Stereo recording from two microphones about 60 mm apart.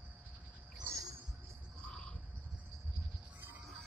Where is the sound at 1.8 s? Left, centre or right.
Centre.